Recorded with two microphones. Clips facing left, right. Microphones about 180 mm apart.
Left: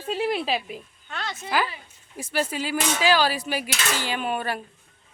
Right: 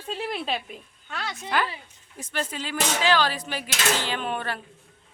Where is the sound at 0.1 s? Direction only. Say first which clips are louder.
Left 5 dB; 5° left (ahead or behind).